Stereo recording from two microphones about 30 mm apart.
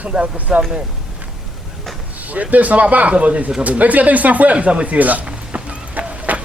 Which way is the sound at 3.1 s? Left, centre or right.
Right.